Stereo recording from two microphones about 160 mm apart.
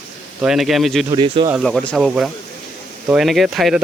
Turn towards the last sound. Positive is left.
turn(degrees=0)  # may be behind; listen again after turning